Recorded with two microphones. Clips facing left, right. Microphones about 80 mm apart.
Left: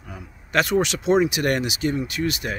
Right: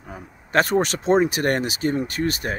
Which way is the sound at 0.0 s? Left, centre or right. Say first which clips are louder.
Right 2 dB; right.